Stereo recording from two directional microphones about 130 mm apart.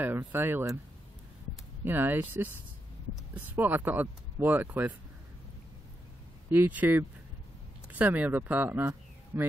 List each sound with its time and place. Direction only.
0.0 s speech: 15° right (ahead or behind)
1.9 s speech: 15° right (ahead or behind)
6.5 s speech: 10° right (ahead or behind)